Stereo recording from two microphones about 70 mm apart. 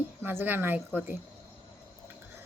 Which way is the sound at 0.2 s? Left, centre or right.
Right.